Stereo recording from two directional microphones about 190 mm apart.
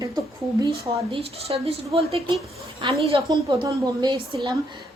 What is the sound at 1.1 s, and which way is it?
A woman's voice, 30° right (ahead or behind).